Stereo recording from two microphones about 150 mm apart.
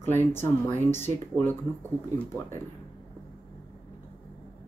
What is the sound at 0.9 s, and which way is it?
Speech, 15° left (ahead or behind).